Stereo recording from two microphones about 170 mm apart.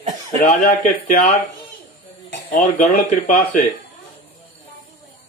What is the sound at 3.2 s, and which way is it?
Speech, 50° left (ahead or behind).